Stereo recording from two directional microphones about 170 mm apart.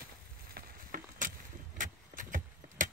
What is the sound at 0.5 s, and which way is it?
Vehicle, 55° right (ahead or behind).